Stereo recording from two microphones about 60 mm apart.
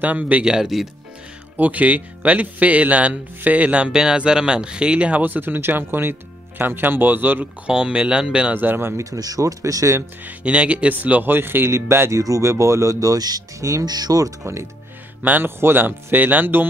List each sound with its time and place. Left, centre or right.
0.0 s speech: right; by 0.8 s centre
1.6 s speech: right
7.6 s speech: centre
8.5 s speech: right
9.1 s speech: right
10.2 s speech: centre; by 12.2 s right
12.2 s speech: right
14.4 s speech: right
15.2 s speech: right